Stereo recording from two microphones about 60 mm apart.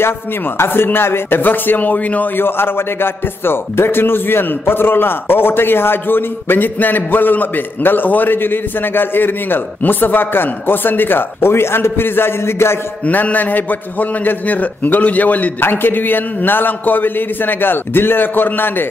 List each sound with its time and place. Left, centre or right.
0.6 s speech: left
2.4 s speech: left
13.0 s a man's voice: left